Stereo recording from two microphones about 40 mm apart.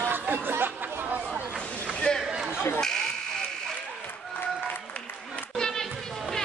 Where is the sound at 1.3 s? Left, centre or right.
Centre.